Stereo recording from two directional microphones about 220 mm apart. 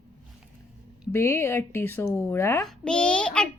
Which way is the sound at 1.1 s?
10° left (ahead or behind).